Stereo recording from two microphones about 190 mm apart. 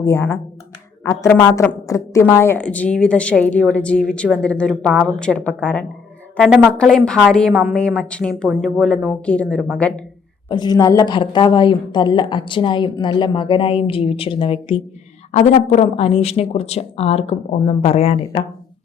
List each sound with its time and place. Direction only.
0.0 s a woman's voice: 15° left (ahead or behind)
10.5 s a woman's voice: 20° left (ahead or behind)
15.3 s speech: 35° left (ahead or behind)